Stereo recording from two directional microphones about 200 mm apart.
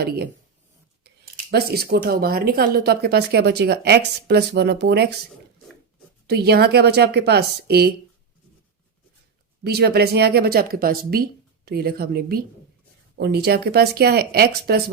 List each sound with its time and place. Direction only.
1.0 s speech: 50° right (ahead or behind)
6.2 s a woman's voice: 55° right (ahead or behind)
9.6 s speech: 55° right (ahead or behind)